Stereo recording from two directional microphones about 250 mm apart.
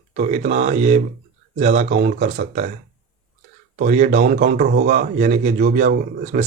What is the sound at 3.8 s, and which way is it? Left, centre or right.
A man's voice, right.